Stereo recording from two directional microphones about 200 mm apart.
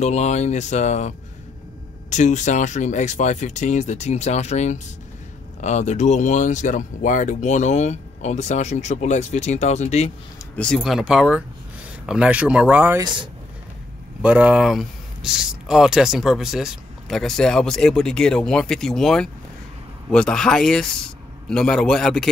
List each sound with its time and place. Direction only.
0.0 s speech: 35° left (ahead or behind)
10.6 s speech: centre (ahead or behind)
13.0 s speech: 25° right (ahead or behind)
14.2 s speech: 5° right (ahead or behind)